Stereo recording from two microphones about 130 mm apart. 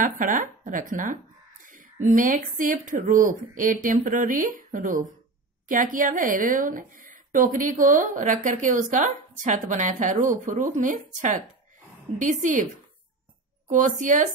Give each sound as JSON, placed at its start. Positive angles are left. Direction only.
{"t": 0.0, "sound": "speech", "side_deg": -90}
{"t": 13.7, "sound": "speech", "side_deg": -80}